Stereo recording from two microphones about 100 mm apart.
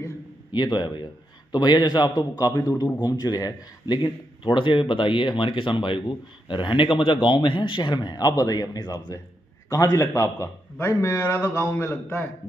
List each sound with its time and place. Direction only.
0.5 s a man's voice: 45° left (ahead or behind); by 12.3 s 25° left (ahead or behind)